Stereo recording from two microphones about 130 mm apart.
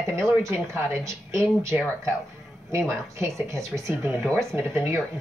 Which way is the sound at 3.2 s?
20° right (ahead or behind).